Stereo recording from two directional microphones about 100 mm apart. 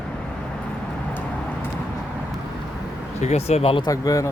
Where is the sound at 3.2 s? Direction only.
90° left.